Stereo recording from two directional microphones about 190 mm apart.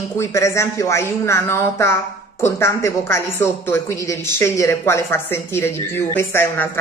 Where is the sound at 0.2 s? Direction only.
15° left (ahead or behind).